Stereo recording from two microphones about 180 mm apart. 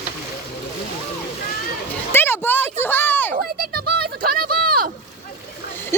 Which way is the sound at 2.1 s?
10° left (ahead or behind).